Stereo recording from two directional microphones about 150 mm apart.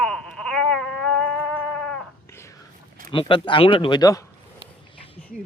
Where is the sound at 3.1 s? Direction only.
35° left (ahead or behind).